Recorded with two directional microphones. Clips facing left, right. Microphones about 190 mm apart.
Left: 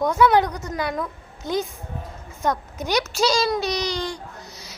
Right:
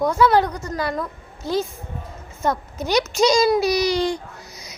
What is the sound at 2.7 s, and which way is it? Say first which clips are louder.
Speech: right 3 dB; 10° left (ahead or behind).